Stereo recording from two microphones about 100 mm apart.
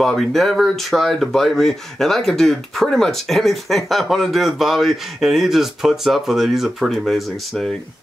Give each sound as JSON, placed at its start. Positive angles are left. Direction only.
{"t": 0.0, "sound": "speech", "side_deg": 0}